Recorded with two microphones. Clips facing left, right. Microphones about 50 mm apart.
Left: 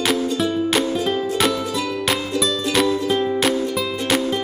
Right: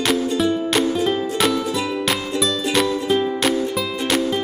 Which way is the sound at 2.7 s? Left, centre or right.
Centre.